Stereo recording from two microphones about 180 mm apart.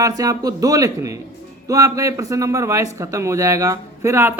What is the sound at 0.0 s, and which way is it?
Speech, 20° right (ahead or behind).